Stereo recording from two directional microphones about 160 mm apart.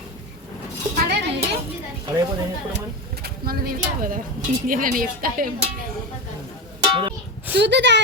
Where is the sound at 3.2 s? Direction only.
70° right (ahead or behind).